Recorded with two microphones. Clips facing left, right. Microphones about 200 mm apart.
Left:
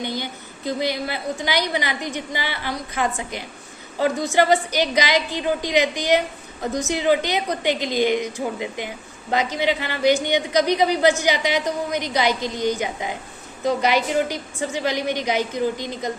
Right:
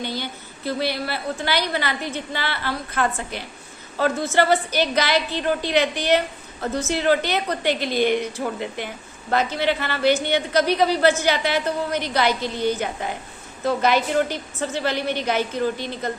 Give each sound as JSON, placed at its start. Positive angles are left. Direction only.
{"t": 0.0, "sound": "a woman's voice", "side_deg": 15}